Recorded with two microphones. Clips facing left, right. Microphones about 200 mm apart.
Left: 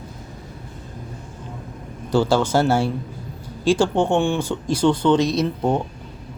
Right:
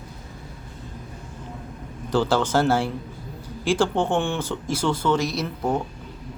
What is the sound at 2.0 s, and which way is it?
Speech, 10° left (ahead or behind).